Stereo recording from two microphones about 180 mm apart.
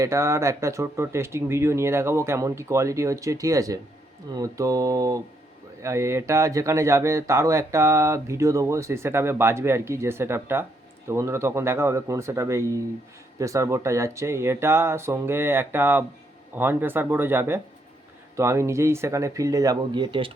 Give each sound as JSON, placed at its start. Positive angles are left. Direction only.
{"t": 0.0, "sound": "speech", "side_deg": -15}
{"t": 4.4, "sound": "mantra", "side_deg": -20}
{"t": 5.8, "sound": "speech", "side_deg": -15}